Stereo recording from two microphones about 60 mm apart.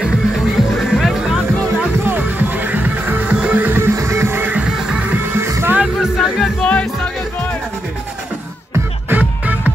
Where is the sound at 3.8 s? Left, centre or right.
Right.